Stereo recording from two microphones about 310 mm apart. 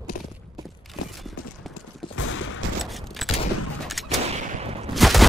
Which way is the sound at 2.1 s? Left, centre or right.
Left.